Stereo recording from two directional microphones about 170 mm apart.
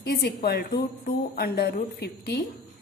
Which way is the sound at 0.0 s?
70° left (ahead or behind).